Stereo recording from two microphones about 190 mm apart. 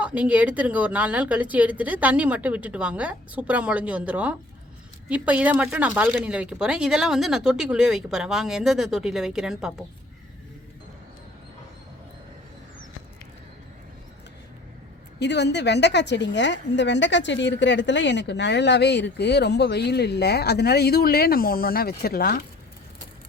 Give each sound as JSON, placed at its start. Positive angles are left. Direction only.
{"t": 0.0, "sound": "a woman's voice", "side_deg": -5}
{"t": 15.2, "sound": "a woman's voice", "side_deg": 65}